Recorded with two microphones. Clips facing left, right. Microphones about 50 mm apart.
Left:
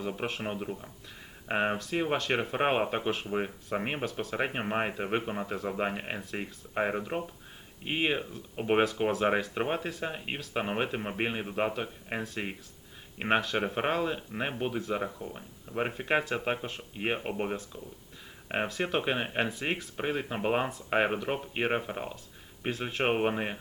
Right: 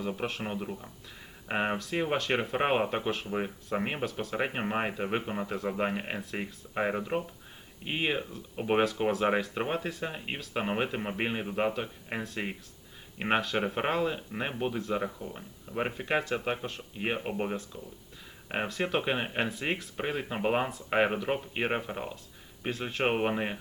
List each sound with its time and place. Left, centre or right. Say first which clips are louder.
0.3 s speech: left 1 dB; centre